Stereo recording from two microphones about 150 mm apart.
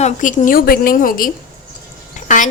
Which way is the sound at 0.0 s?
60° left (ahead or behind).